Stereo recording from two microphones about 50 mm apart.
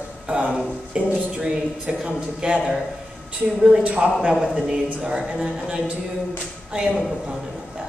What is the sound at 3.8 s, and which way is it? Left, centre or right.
Speech, right.